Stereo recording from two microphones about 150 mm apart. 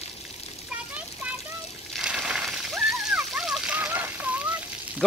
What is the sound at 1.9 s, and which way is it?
Splash, 5° right (ahead or behind).